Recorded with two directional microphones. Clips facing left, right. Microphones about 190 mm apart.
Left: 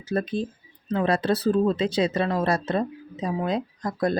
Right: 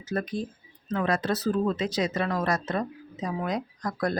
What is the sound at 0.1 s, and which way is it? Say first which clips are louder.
Speech: left 4 dB; 25° left (ahead or behind).